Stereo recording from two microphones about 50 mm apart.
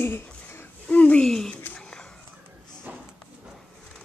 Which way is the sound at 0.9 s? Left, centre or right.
Left.